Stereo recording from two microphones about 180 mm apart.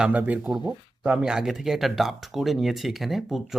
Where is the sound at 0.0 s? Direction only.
10° right (ahead or behind).